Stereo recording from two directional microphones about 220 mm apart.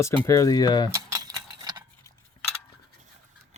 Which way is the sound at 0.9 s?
15° right (ahead or behind).